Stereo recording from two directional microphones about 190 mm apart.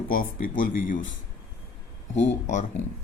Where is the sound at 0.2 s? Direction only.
45° left (ahead or behind).